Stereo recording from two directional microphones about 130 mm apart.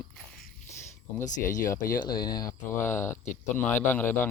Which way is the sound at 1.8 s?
90° left.